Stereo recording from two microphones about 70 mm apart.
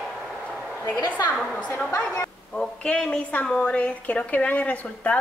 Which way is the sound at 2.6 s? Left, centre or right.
Centre.